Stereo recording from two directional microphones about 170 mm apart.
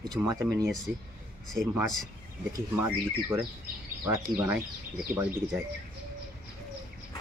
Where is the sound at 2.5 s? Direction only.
15° right (ahead or behind).